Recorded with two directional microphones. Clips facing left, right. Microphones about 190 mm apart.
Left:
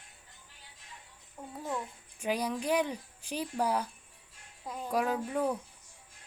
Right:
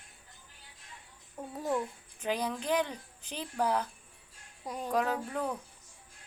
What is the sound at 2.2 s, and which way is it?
Speech, 10° left (ahead or behind).